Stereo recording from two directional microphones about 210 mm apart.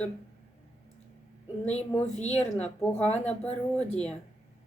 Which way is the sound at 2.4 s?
5° left (ahead or behind).